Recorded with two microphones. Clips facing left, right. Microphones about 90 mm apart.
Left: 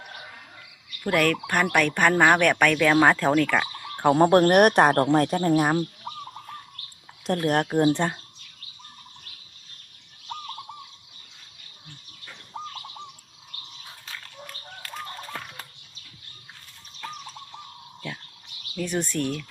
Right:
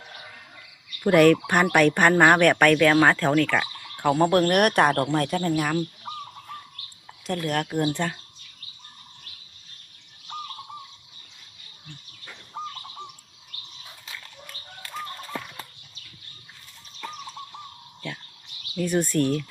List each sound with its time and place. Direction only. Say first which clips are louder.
1.0 s speech: right 6 dB; 10° right (ahead or behind); by 3.7 s 10° left (ahead or behind)
4.1 s speech: left 3 dB; 35° left (ahead or behind)
7.3 s speech: left 4 dB; 40° left (ahead or behind); by 8.2 s 25° left (ahead or behind)
18.8 s speech: right 4 dB; 5° right (ahead or behind)